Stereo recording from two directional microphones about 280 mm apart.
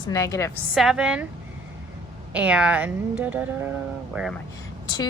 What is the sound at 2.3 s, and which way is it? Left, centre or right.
A woman's voice, centre.